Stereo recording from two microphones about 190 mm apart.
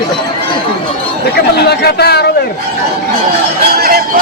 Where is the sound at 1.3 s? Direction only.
60° left (ahead or behind).